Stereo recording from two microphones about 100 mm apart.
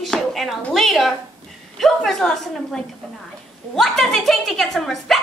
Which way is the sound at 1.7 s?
Centre (ahead or behind).